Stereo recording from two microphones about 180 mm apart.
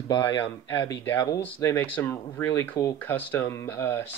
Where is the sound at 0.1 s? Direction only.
25° left (ahead or behind).